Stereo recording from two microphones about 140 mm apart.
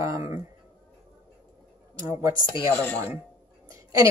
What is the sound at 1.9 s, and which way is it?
Speech, 25° right (ahead or behind).